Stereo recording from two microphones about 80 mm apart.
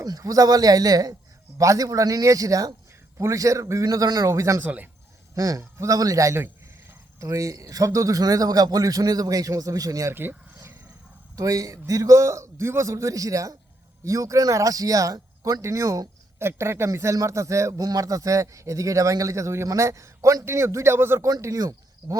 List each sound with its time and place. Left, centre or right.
0.0 s a man's voice: right
3.8 s a man's voice: right
4.6 s speech: right
5.3 s a man's voice: right
10.1 s speech: right
11.3 s a man's voice: right
21.4 s a man's voice: right